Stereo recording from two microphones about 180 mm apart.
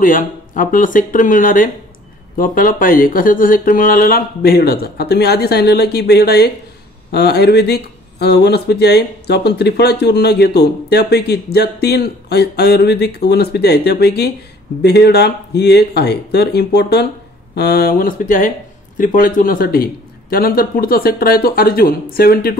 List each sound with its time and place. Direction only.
0.0 s speech: 50° left (ahead or behind)